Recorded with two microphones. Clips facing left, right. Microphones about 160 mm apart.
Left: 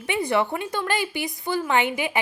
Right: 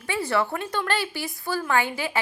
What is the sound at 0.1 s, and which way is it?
A woman's voice, 15° left (ahead or behind).